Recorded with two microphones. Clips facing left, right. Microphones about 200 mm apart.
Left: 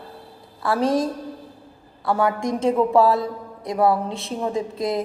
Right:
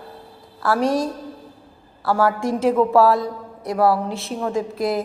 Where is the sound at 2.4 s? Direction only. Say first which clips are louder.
Right 2 dB; 5° right (ahead or behind).